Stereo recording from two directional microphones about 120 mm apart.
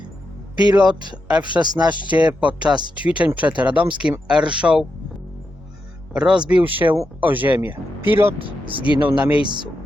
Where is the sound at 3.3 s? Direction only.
10° right (ahead or behind).